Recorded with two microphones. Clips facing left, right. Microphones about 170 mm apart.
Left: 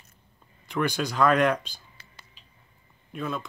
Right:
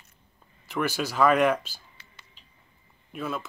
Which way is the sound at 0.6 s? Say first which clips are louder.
Left 1 dB; 5° right (ahead or behind).